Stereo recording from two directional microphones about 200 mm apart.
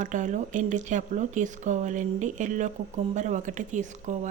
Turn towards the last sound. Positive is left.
turn(degrees=-40)  # may be behind; listen again after turning